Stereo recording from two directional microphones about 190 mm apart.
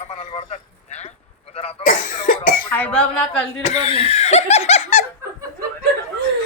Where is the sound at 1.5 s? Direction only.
35° left (ahead or behind).